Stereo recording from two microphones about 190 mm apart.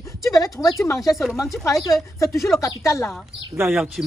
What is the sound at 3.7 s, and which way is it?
Speech, 5° right (ahead or behind).